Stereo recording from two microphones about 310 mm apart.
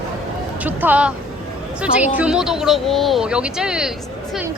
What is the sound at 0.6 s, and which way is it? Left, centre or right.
Speech, centre.